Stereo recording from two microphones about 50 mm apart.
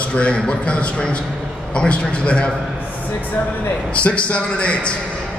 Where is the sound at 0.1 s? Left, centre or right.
Left.